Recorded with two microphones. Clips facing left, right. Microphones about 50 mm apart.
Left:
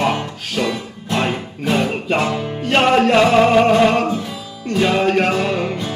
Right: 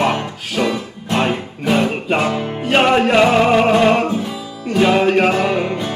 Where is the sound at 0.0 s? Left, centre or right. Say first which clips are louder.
Right 1 dB; centre.